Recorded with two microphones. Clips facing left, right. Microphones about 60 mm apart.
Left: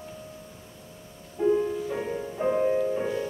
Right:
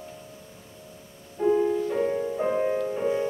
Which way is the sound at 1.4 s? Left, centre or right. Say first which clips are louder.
Right 2 dB; centre.